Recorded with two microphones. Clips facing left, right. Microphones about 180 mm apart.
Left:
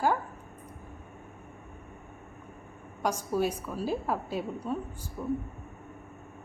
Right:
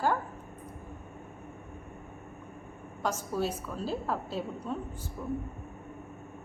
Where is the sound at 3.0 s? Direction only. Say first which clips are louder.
Left 3 dB; 10° left (ahead or behind).